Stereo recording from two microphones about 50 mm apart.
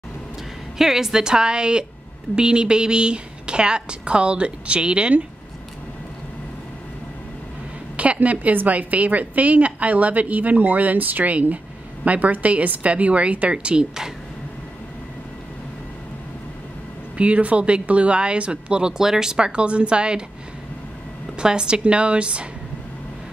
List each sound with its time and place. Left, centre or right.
0.7 s a woman's voice: centre
8.0 s a woman's voice: right
17.2 s speech: right
21.4 s speech: centre